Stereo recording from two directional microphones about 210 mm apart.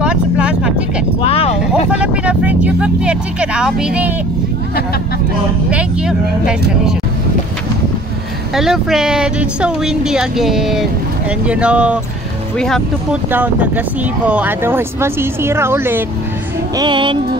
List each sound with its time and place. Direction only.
0.0 s vehicle: 5° right (ahead or behind)
1.2 s a sound: 30° left (ahead or behind)
1.9 s speech: 5° right (ahead or behind)
5.7 s speech: 5° right (ahead or behind)
8.5 s speech: centre (ahead or behind)
13.3 s speech: 10° right (ahead or behind)
16.7 s music: 20° right (ahead or behind)